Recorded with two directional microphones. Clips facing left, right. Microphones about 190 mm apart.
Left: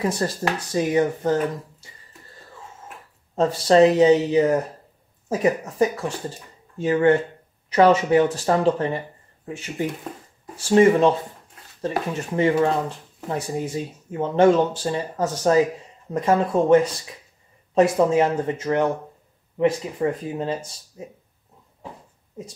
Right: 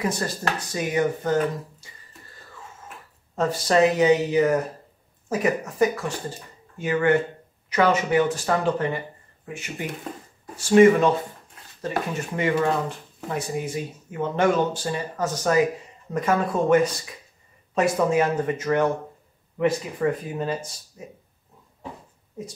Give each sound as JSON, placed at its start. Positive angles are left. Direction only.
{"t": 0.0, "sound": "speech", "side_deg": 30}
{"t": 3.3, "sound": "speech", "side_deg": 30}
{"t": 12.4, "sound": "speech", "side_deg": 30}